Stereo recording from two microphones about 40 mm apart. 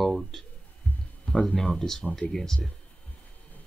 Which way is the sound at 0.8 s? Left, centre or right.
Left.